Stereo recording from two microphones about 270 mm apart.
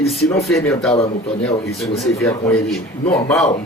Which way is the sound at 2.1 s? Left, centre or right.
Centre.